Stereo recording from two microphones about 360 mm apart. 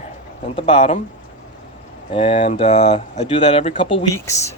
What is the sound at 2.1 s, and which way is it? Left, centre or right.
Speech, centre.